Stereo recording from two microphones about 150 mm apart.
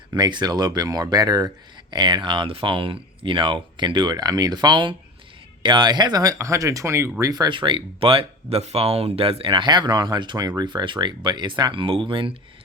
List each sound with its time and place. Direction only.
0.1 s speech: 30° right (ahead or behind)